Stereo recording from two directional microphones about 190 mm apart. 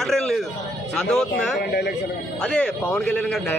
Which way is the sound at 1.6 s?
60° left (ahead or behind).